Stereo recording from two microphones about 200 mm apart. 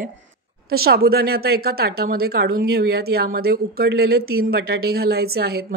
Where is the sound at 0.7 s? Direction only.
50° right (ahead or behind).